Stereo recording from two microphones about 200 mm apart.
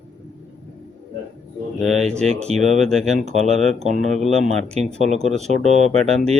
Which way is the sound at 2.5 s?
35° right (ahead or behind).